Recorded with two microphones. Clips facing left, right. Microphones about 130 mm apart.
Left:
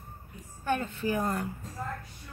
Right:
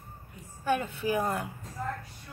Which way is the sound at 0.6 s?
10° right (ahead or behind).